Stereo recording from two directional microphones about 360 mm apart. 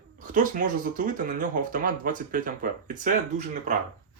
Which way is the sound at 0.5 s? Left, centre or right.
Right.